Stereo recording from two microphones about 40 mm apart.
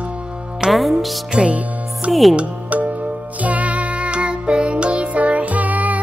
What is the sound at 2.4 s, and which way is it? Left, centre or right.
Music, right.